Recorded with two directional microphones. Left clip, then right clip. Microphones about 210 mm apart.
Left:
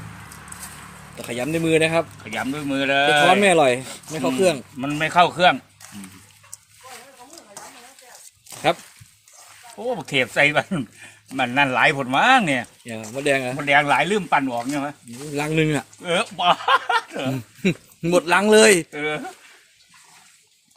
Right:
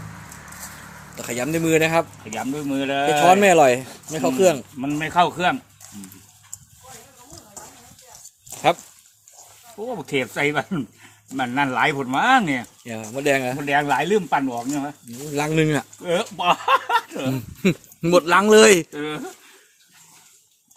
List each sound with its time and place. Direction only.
1.1 s speech: centre (ahead or behind)
2.2 s speech: 10° left (ahead or behind)
3.4 s speech: centre (ahead or behind)
3.8 s a sound: 15° left (ahead or behind)
4.1 s speech: centre (ahead or behind)
4.8 s speech: 25° left (ahead or behind)
8.5 s a sound: centre (ahead or behind)
9.9 s speech: 25° left (ahead or behind)
12.8 s speech: centre (ahead or behind)
13.6 s speech: 15° left (ahead or behind)
15.3 s speech: centre (ahead or behind)
16.0 s speech: 10° left (ahead or behind)
17.3 s speech: centre (ahead or behind)